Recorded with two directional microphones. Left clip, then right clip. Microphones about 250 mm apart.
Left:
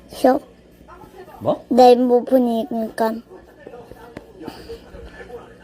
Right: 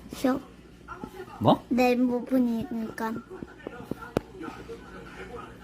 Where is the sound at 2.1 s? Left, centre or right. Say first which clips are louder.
Left 12 dB; centre.